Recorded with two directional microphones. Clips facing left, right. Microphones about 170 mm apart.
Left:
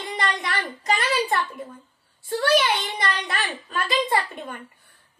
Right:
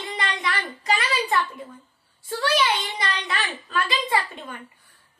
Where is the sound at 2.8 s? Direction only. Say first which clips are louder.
Left 2 dB; 45° left (ahead or behind).